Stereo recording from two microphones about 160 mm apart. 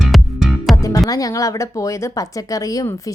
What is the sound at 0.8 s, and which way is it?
A woman's voice, 20° left (ahead or behind).